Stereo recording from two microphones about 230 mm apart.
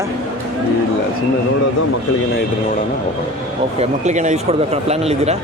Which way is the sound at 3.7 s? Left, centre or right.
Right.